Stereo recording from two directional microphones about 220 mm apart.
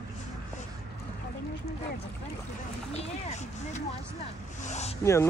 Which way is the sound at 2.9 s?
30° left (ahead or behind).